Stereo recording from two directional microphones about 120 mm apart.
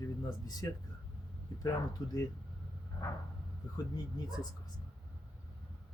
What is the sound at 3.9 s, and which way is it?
Speech, 35° left (ahead or behind).